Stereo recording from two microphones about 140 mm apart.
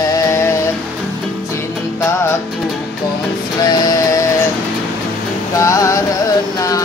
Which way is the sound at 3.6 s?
30° left (ahead or behind).